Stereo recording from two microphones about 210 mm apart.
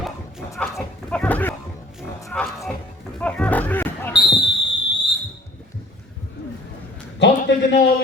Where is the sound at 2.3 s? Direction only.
Centre (ahead or behind).